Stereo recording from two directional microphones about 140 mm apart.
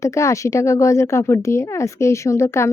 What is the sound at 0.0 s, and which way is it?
A woman's voice, 20° left (ahead or behind).